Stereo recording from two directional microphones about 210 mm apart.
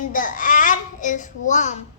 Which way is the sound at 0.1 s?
40° left (ahead or behind).